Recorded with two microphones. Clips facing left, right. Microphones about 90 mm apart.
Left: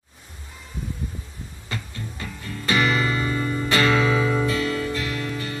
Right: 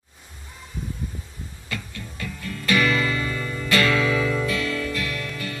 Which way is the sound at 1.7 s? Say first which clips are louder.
Left 1 dB; 30° left (ahead or behind).